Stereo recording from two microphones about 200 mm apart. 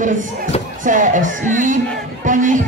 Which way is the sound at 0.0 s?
40° right (ahead or behind).